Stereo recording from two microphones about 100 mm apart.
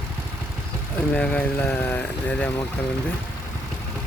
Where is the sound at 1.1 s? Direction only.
15° left (ahead or behind).